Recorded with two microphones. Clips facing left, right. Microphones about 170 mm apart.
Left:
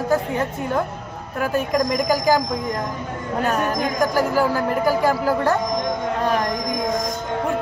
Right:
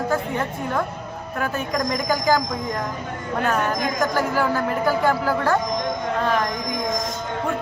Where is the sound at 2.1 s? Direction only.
15° left (ahead or behind).